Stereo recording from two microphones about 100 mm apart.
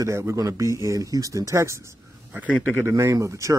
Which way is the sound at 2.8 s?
30° right (ahead or behind).